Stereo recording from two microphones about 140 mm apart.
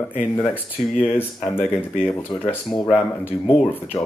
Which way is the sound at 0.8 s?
55° left (ahead or behind).